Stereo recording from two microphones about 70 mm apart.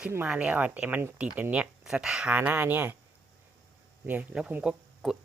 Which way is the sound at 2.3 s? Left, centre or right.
Right.